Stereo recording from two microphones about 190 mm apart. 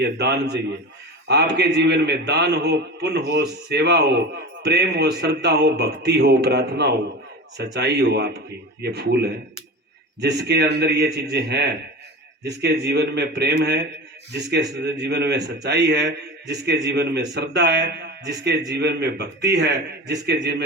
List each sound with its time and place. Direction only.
0.0 s a man's voice: 60° right (ahead or behind)